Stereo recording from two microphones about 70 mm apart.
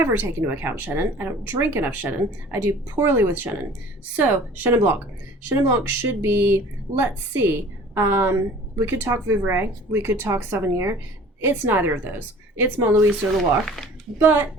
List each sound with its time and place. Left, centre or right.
0.0 s speech: right
7.9 s speech: right
13.3 s speech: centre
14.2 s speech: right